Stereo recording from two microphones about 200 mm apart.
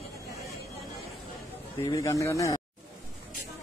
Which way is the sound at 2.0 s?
15° left (ahead or behind).